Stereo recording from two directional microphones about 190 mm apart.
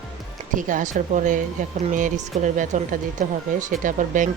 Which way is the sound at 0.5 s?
45° right (ahead or behind).